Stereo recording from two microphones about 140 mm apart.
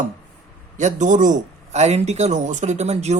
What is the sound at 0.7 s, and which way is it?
Speech, 60° right (ahead or behind).